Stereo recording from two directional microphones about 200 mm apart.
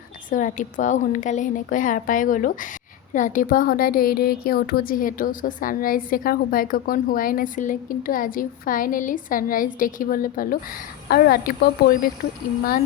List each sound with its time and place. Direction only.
0.3 s a woman's voice: 40° left (ahead or behind)